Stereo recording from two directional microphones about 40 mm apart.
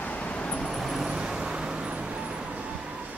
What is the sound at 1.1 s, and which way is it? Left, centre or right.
Vehicle, centre.